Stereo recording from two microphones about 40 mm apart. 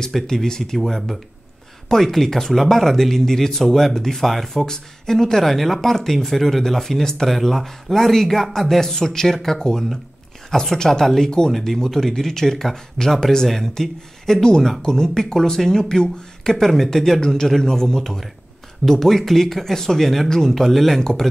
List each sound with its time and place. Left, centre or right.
0.1 s speech: centre
11.5 s speech: centre
21.0 s speech: centre